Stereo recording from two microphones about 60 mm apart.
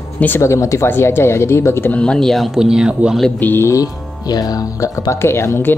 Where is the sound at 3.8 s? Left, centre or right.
Left.